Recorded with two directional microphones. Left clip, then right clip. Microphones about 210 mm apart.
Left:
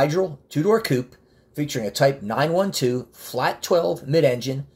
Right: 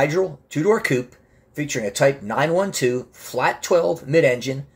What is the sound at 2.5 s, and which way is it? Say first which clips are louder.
Speech: right 1 dB; 25° left (ahead or behind).